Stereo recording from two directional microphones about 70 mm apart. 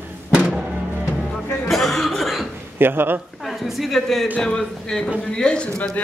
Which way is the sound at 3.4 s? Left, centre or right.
Centre.